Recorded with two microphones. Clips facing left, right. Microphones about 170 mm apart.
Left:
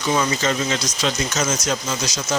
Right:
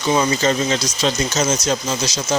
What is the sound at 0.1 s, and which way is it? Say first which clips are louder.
Speech: right 4 dB; 30° right (ahead or behind).